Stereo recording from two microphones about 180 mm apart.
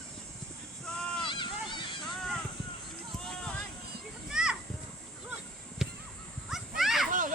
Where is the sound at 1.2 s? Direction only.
25° left (ahead or behind).